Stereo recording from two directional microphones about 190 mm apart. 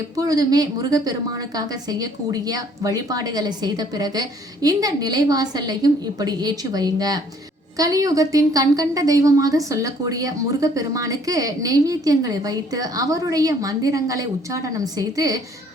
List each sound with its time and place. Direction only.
0.2 s a woman's voice: 20° right (ahead or behind)